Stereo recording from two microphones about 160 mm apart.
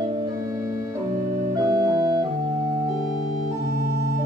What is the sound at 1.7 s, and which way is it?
Music, 25° right (ahead or behind).